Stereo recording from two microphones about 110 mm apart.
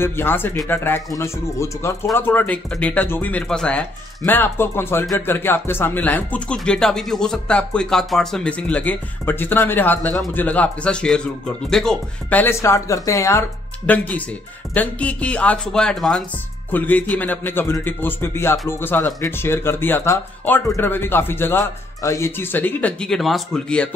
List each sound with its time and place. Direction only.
0.0 s speech: 20° left (ahead or behind)
13.8 s speech: 15° left (ahead or behind)
16.7 s speech: 15° left (ahead or behind)